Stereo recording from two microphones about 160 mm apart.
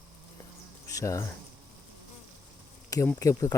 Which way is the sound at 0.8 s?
20° left (ahead or behind).